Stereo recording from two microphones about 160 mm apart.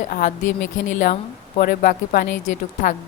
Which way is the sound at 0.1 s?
55° left (ahead or behind).